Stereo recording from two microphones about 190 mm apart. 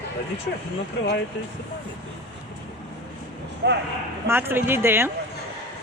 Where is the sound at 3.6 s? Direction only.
60° right (ahead or behind).